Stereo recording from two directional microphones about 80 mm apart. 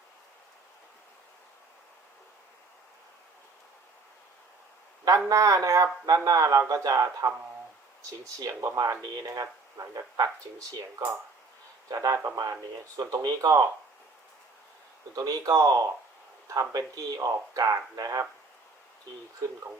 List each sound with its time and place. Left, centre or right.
5.3 s speech: right
11.9 s speech: right
15.1 s speech: right